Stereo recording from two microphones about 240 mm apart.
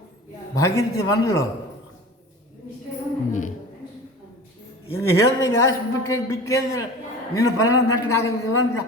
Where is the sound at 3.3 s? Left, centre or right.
Left.